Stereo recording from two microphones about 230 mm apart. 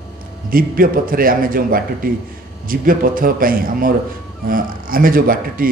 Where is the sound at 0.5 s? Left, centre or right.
Right.